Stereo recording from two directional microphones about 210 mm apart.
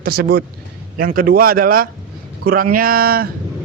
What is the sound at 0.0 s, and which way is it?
A man's voice, 45° right (ahead or behind).